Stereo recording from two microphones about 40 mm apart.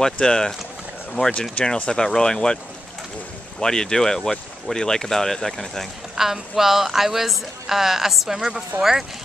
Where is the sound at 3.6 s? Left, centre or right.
Centre.